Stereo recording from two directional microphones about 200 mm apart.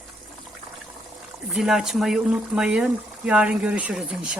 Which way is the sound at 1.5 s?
Centre (ahead or behind).